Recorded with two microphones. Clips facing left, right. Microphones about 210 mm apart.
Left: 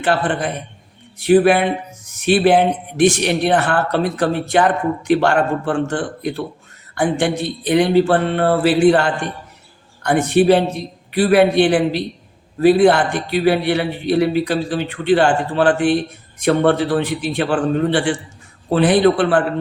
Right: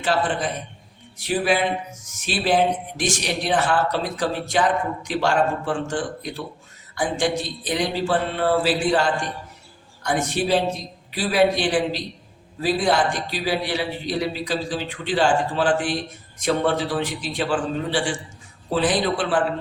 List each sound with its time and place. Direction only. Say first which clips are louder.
0.0 s a man's voice: left 4 dB; 60° left (ahead or behind)